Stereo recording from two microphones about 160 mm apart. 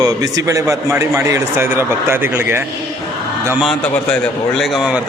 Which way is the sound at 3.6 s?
5° left (ahead or behind).